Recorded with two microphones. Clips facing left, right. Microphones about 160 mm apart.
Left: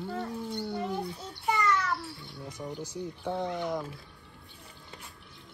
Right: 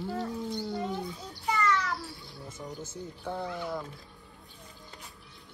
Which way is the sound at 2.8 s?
15° left (ahead or behind).